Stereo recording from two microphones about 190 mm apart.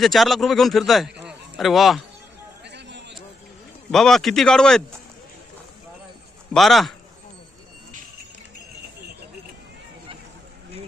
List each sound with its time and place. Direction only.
0.0 s a man's voice: centre (ahead or behind)
2.6 s a sound: 65° right (ahead or behind)
3.9 s a man's voice: centre (ahead or behind)
6.5 s a man's voice: centre (ahead or behind)